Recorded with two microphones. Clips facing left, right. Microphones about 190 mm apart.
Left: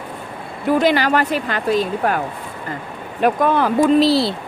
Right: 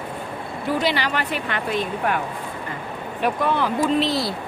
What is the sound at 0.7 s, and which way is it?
Speech, 50° left (ahead or behind).